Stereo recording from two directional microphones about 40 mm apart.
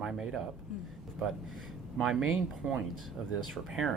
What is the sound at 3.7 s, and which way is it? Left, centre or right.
Speech, centre.